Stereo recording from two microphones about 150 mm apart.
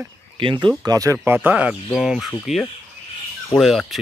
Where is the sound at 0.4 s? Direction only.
35° right (ahead or behind).